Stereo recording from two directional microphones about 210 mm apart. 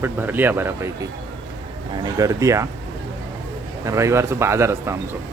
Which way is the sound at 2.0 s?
15° right (ahead or behind).